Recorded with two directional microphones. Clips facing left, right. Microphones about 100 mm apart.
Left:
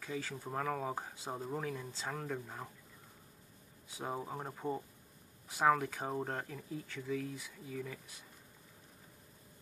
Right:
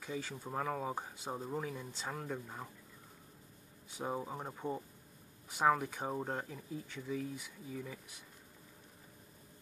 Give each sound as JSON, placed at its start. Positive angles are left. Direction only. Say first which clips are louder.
{"t": 0.0, "sound": "speech", "louder": "left 1 dB", "side_deg": -15}
{"t": 4.0, "sound": "speech", "louder": "right 1 dB", "side_deg": 0}
{"t": 5.6, "sound": "speech", "louder": "left 1 dB", "side_deg": -10}